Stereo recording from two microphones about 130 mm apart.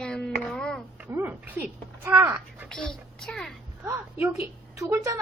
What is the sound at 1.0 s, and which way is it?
A woman's voice, 15° right (ahead or behind).